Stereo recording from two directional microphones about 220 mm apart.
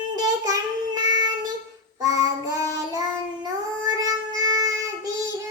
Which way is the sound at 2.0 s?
15° right (ahead or behind).